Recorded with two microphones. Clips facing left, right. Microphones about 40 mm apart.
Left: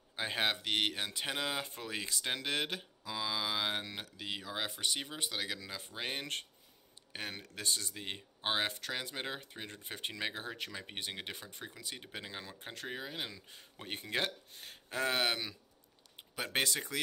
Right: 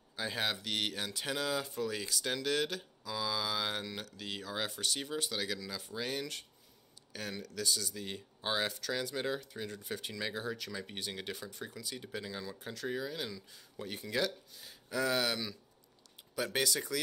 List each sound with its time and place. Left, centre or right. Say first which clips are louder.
0.1 s speech: left 2 dB; left
5.6 s speech: right 2 dB; left